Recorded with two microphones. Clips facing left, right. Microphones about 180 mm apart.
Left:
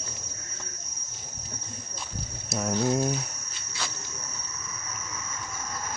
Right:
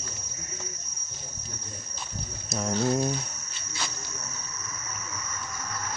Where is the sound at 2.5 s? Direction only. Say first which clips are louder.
Even; 5° left (ahead or behind).